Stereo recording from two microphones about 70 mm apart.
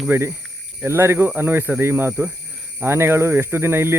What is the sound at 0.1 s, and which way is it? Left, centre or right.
Speech, right.